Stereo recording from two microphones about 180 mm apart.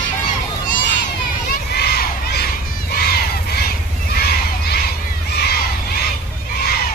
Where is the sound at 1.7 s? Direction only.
65° left (ahead or behind).